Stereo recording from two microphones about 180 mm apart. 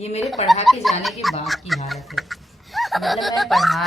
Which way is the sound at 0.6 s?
Centre (ahead or behind).